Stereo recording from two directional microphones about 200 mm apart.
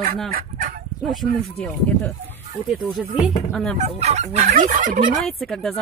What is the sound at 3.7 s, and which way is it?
Fowl, 35° right (ahead or behind).